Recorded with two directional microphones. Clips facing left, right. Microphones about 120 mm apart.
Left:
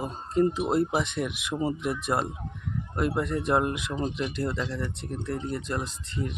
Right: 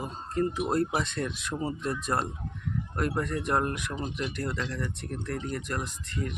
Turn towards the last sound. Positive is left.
turn(degrees=25)  # may be behind; listen again after turning